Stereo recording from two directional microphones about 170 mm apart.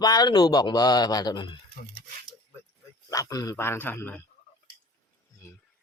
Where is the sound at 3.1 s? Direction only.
20° left (ahead or behind).